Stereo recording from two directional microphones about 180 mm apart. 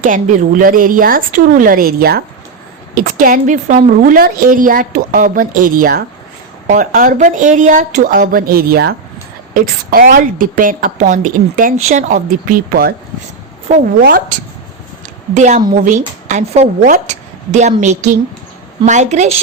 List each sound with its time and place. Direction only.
0.0 s a woman's voice: 45° right (ahead or behind)
14.0 s speech: 60° right (ahead or behind)
15.4 s a woman's voice: 40° right (ahead or behind)